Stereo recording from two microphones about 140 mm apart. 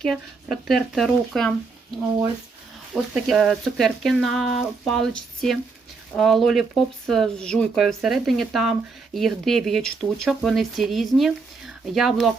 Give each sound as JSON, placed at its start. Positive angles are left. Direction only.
{"t": 0.0, "sound": "speech", "side_deg": 0}
{"t": 2.9, "sound": "speech", "side_deg": 0}